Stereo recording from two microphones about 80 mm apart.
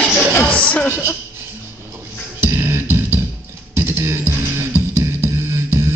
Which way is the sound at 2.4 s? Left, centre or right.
Right.